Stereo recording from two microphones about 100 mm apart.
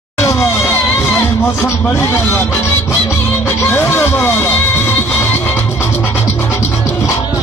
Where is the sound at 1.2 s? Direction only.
25° left (ahead or behind).